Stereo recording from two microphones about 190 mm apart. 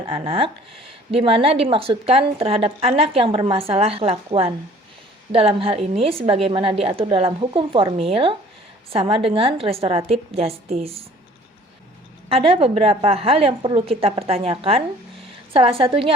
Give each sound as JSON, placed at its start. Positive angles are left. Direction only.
{"t": 0.1, "sound": "a woman's voice", "side_deg": -30}
{"t": 12.3, "sound": "a woman's voice", "side_deg": -30}